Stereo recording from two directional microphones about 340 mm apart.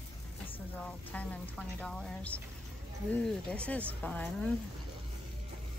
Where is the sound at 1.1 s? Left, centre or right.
Centre.